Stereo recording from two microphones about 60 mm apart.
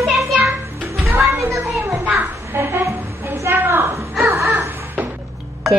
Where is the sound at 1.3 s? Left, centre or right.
Right.